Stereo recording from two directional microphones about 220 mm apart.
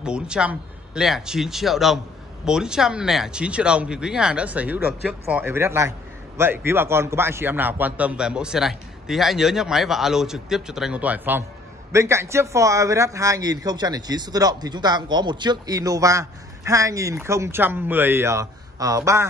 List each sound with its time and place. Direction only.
0.0 s a man's voice: 5° right (ahead or behind)